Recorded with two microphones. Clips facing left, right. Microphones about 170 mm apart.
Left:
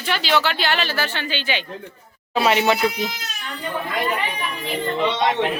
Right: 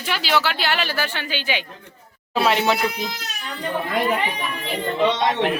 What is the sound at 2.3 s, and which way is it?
Speech, centre (ahead or behind).